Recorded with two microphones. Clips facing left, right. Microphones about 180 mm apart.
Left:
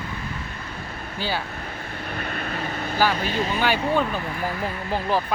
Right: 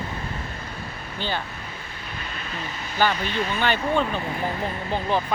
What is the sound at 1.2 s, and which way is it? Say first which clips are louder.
Speech: left 1 dB; 5° left (ahead or behind).